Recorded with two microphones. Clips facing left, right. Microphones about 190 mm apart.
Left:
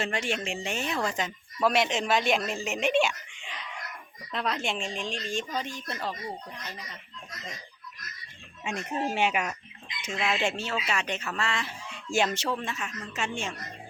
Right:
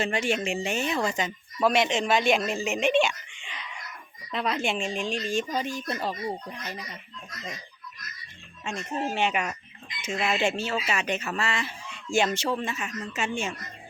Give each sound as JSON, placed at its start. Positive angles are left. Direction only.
{"t": 0.0, "sound": "speech", "side_deg": 0}
{"t": 8.6, "sound": "speech", "side_deg": 15}